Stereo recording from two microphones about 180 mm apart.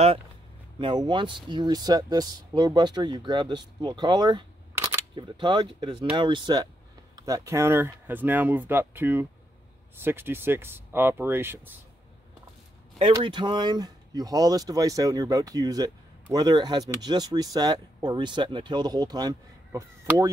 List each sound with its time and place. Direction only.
0.7 s speech: 25° right (ahead or behind)
13.0 s speech: 25° right (ahead or behind)